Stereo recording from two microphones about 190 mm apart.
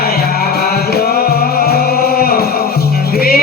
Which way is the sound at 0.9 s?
55° left (ahead or behind).